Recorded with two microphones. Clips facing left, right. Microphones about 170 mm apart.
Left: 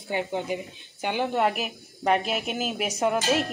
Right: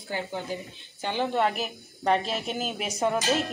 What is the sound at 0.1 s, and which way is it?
Speech, 20° left (ahead or behind).